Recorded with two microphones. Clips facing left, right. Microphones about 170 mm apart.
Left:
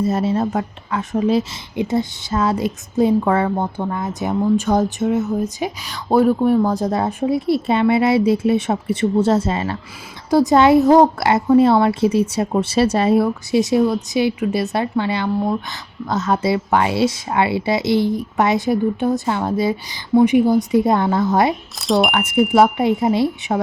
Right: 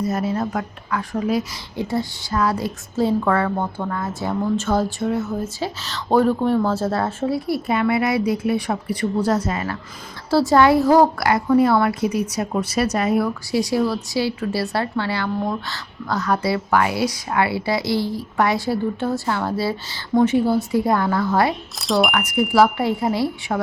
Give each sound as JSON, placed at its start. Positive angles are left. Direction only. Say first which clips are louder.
{"t": 0.0, "sound": "a woman's voice", "louder": "left 4 dB", "side_deg": 25}
{"t": 21.8, "sound": "speech", "louder": "left 2 dB", "side_deg": 0}
{"t": 22.1, "sound": "a woman's voice", "louder": "left 3 dB", "side_deg": 25}